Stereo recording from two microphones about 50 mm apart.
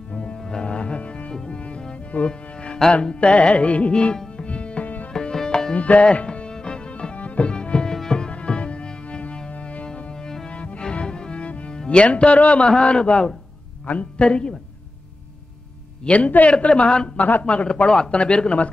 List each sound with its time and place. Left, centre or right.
0.1 s music: centre
5.1 s music: centre
5.8 s music: left
11.8 s speech: left
16.1 s a man's voice: left